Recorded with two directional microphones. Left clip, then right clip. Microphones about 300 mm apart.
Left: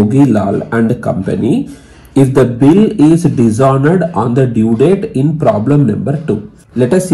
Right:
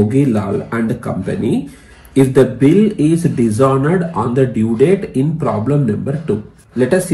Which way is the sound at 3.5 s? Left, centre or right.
Left.